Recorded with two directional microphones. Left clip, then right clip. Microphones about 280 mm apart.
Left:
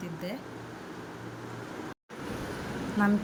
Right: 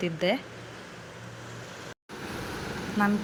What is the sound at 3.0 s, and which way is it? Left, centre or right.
Speech, centre.